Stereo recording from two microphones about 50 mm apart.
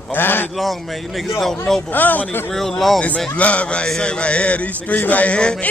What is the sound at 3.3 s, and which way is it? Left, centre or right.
A man's voice, left.